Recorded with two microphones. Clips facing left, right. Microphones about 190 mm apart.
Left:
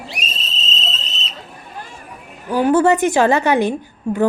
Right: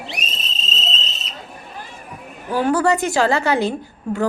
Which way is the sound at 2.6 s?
20° left (ahead or behind).